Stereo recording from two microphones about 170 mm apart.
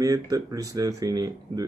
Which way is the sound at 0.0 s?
20° right (ahead or behind).